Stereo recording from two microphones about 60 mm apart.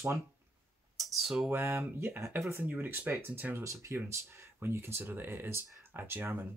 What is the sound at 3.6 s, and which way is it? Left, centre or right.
Speech, right.